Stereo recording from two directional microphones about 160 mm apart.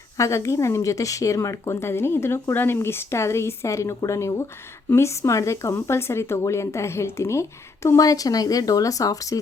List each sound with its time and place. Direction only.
0.2 s speech: 20° left (ahead or behind)